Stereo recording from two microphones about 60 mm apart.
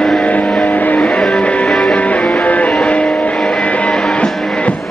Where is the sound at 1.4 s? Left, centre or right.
Centre.